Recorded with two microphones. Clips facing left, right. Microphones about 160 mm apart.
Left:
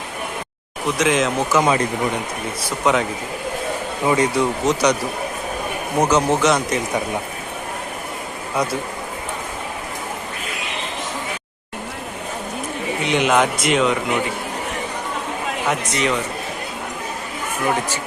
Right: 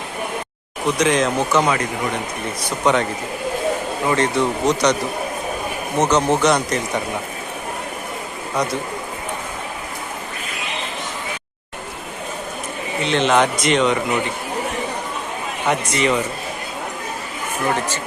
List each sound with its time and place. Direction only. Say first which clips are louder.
0.9 s speech: even; centre (ahead or behind)
1.6 s speech: left 2 dB; 25° left (ahead or behind)
2.6 s speech: right 1 dB; 5° left (ahead or behind)
6.0 s speech: even; 5° left (ahead or behind)
13.1 s speech: right 1 dB; 10° left (ahead or behind)
15.6 s speech: right 3 dB; centre (ahead or behind)
17.7 s speech: even; 10° left (ahead or behind)